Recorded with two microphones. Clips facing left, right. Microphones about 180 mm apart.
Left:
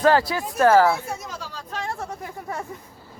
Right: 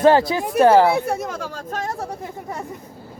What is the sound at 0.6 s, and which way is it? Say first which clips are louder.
Speech: right 2 dB; 20° right (ahead or behind).